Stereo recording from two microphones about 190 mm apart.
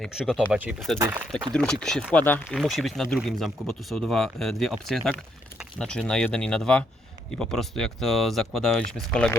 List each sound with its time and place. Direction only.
0.0 s speech: centre (ahead or behind)
0.9 s speech: 15° right (ahead or behind)
1.5 s speech: 5° left (ahead or behind)